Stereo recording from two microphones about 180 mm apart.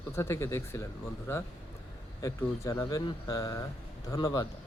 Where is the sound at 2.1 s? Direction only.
20° left (ahead or behind).